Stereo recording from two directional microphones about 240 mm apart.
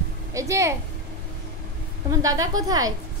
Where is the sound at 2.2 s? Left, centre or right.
Centre.